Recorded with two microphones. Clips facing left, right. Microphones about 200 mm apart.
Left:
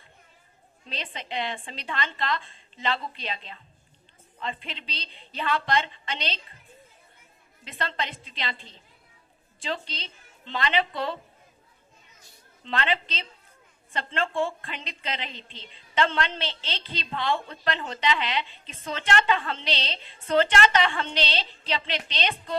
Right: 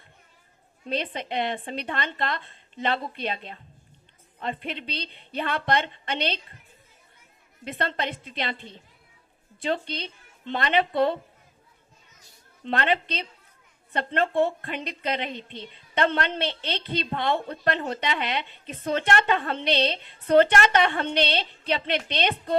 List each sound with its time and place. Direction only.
0.9 s a woman's voice: 55° right (ahead or behind)
7.6 s a woman's voice: 55° right (ahead or behind)
12.6 s a woman's voice: 55° right (ahead or behind)